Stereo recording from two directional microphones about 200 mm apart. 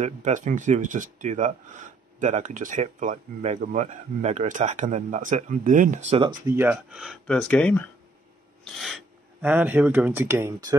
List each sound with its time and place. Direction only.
0.0 s speech: 35° right (ahead or behind)
6.4 s speech: 10° right (ahead or behind)